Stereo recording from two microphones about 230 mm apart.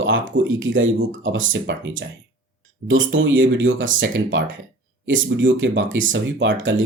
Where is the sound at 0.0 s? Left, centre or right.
Right.